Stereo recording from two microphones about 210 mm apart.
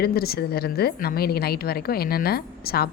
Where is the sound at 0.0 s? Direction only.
45° left (ahead or behind).